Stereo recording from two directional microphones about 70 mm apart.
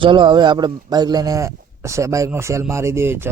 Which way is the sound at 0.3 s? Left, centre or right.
Right.